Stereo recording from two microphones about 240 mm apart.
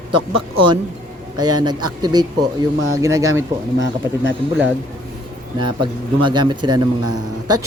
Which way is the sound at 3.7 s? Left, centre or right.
Right.